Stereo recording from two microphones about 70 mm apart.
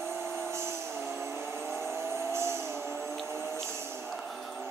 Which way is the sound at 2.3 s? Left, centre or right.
Right.